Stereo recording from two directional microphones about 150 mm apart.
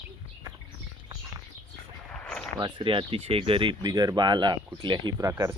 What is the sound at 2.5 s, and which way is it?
Speech, 30° right (ahead or behind).